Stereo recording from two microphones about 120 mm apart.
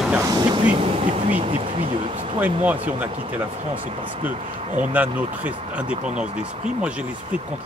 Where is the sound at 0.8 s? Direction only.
50° right (ahead or behind).